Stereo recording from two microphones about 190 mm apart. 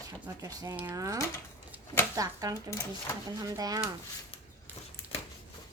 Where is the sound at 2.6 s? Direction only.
15° left (ahead or behind).